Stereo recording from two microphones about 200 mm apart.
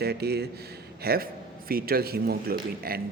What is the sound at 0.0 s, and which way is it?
Speech, 55° right (ahead or behind).